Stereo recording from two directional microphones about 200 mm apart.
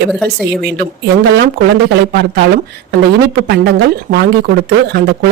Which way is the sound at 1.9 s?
55° right (ahead or behind).